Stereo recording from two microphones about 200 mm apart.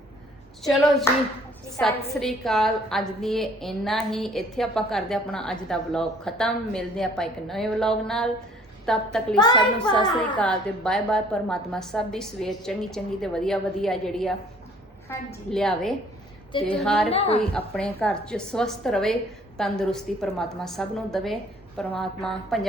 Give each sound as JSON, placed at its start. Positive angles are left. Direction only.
{"t": 0.6, "sound": "a woman's voice", "side_deg": 0}
{"t": 9.4, "sound": "a woman's voice", "side_deg": 20}
{"t": 10.3, "sound": "a woman's voice", "side_deg": 5}
{"t": 15.5, "sound": "a woman's voice", "side_deg": 0}
{"t": 16.5, "sound": "a woman's voice", "side_deg": 25}
{"t": 16.7, "sound": "a woman's voice", "side_deg": 5}
{"t": 17.1, "sound": "a woman's voice", "side_deg": 30}
{"t": 17.5, "sound": "a woman's voice", "side_deg": 5}